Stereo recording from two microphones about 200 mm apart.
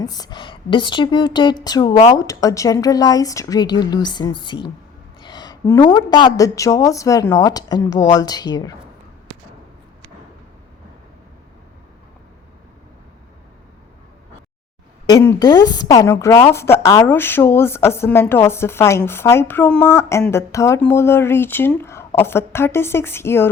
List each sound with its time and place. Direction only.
0.0 s a woman's voice: 20° left (ahead or behind)
15.0 s a woman's voice: 15° left (ahead or behind)